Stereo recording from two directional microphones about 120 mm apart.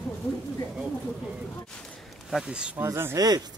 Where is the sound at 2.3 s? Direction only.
5° right (ahead or behind).